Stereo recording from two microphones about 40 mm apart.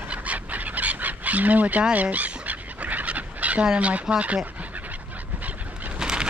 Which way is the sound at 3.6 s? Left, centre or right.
Right.